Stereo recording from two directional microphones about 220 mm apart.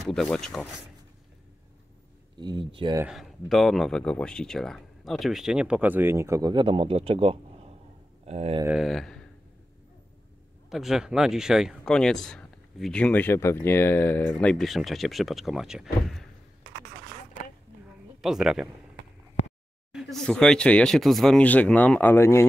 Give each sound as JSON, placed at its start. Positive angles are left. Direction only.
{"t": 0.0, "sound": "speech", "side_deg": 0}
{"t": 2.3, "sound": "speech", "side_deg": -20}
{"t": 3.0, "sound": "speech", "side_deg": 0}
{"t": 8.6, "sound": "speech", "side_deg": 0}
{"t": 10.7, "sound": "speech", "side_deg": 0}
{"t": 18.2, "sound": "speech", "side_deg": 0}
{"t": 19.9, "sound": "speech", "side_deg": 0}